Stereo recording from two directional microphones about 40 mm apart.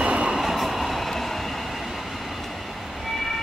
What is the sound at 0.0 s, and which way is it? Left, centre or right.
Train, right.